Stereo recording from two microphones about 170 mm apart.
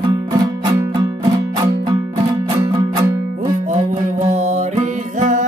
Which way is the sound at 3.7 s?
40° right (ahead or behind).